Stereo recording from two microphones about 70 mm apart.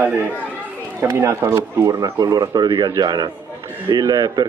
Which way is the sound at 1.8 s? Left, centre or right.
Right.